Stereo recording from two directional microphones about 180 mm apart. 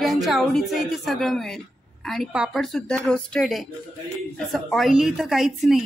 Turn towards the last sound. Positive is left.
turn(degrees=0)  # may be behind; listen again after turning